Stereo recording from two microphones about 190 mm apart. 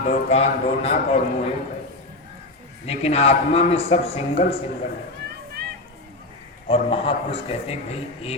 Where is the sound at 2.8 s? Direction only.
35° left (ahead or behind).